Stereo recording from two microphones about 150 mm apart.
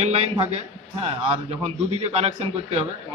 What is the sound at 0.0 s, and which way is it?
A man's voice, 45° right (ahead or behind).